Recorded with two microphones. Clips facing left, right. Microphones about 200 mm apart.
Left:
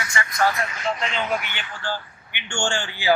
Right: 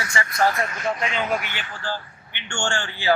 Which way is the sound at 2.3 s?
15° left (ahead or behind).